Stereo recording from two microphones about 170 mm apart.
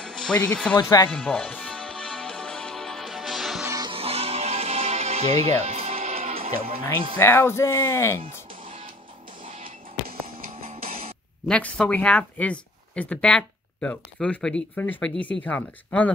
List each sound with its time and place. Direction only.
0.0 s speech: 5° left (ahead or behind)
0.7 s speech: 25° left (ahead or behind)
1.1 s music: 5° left (ahead or behind)
3.6 s music: 20° right (ahead or behind)
3.9 s music: 35° right (ahead or behind)
7.2 s speech: 15° left (ahead or behind)
9.4 s music: 55° right (ahead or behind)
10.7 s music: 35° right (ahead or behind)
11.4 s speech: 5° left (ahead or behind)